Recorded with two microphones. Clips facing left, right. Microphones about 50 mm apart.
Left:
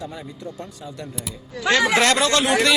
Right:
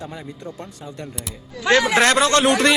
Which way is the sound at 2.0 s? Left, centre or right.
Right.